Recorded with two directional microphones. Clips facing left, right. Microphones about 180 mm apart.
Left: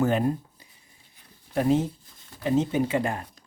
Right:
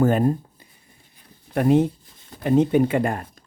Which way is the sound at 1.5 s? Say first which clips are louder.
Right 5 dB; 60° right (ahead or behind).